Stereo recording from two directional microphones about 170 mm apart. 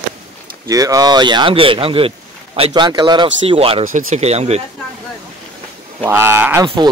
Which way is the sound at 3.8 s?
45° right (ahead or behind).